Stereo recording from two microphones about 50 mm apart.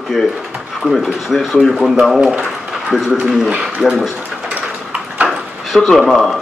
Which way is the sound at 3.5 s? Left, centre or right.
Right.